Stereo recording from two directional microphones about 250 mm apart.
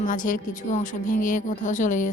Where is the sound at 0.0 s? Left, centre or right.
Left.